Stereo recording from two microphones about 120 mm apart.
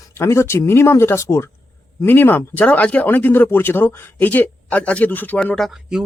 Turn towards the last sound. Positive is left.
turn(degrees=0)  # may be behind; listen again after turning